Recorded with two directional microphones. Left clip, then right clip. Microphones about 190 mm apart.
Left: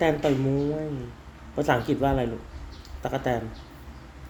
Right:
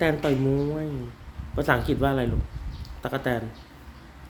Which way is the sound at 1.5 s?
20° right (ahead or behind).